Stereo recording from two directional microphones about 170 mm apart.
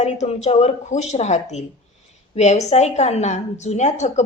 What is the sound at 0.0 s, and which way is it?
A woman's voice, 40° left (ahead or behind).